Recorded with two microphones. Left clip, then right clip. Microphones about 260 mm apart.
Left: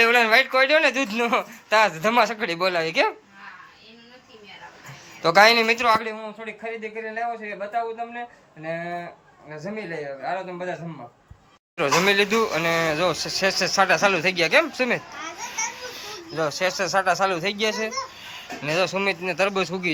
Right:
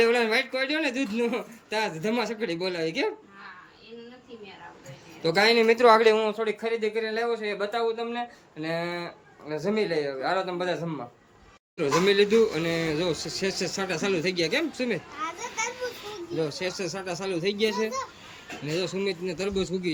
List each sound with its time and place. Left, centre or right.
0.0 s speech: centre
5.2 s speech: centre
5.7 s a man's voice: right
6.4 s speech: centre
11.8 s speech: centre